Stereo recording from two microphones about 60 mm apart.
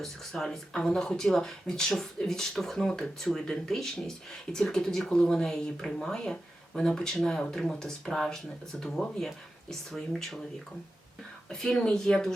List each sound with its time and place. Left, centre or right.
0.0 s speech: centre
11.4 s speech: centre